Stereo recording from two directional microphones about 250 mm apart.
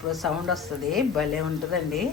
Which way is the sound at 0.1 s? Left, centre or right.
Centre.